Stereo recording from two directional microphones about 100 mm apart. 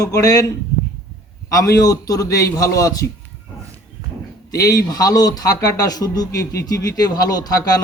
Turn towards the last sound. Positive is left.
turn(degrees=40)  # may be behind; listen again after turning